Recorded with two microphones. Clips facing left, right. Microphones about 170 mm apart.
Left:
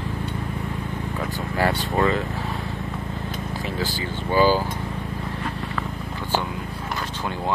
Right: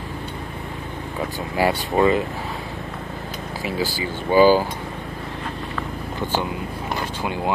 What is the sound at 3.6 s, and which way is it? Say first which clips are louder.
Speech: right 5 dB; 10° right (ahead or behind).